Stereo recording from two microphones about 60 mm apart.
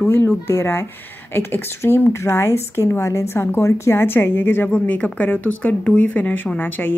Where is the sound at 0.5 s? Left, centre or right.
Left.